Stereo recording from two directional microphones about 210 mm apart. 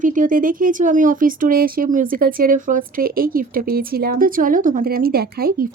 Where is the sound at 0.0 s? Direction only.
40° right (ahead or behind).